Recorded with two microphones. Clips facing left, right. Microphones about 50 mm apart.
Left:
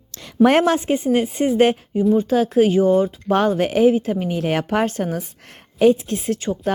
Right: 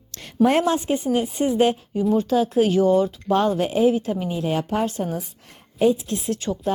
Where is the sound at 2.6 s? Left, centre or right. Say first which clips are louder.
Left 3 dB; left.